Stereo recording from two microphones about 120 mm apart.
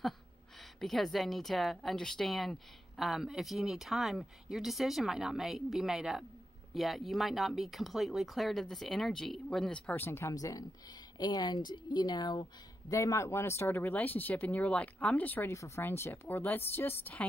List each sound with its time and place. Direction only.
0.7 s a woman's voice: centre (ahead or behind)